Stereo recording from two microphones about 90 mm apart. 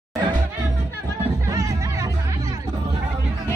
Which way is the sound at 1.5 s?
40° right (ahead or behind).